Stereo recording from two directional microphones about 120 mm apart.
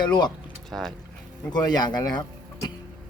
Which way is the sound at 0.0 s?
35° left (ahead or behind).